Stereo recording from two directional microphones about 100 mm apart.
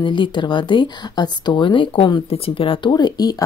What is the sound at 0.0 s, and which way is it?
Speech, 55° left (ahead or behind).